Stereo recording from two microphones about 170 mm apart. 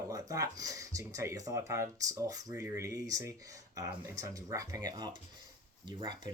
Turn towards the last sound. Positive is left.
turn(degrees=-25)  # may be behind; listen again after turning